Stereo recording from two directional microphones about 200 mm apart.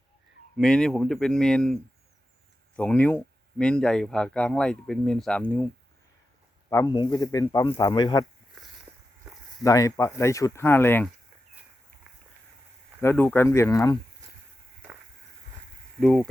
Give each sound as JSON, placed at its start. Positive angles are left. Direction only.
{"t": 0.5, "sound": "speech", "side_deg": 5}
{"t": 6.7, "sound": "speech", "side_deg": 15}
{"t": 9.6, "sound": "speech", "side_deg": 15}
{"t": 13.0, "sound": "speech", "side_deg": 10}
{"t": 16.0, "sound": "speech", "side_deg": 0}